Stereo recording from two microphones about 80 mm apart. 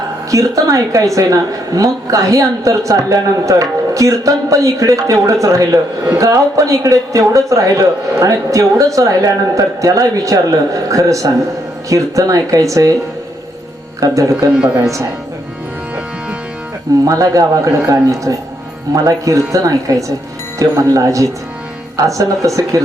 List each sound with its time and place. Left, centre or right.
0.3 s a woman's voice: right
14.0 s a woman's voice: right
14.5 s speech: centre
17.1 s a woman's voice: right